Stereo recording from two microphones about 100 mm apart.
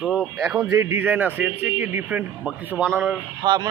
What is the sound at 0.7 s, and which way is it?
A man's voice, 25° right (ahead or behind).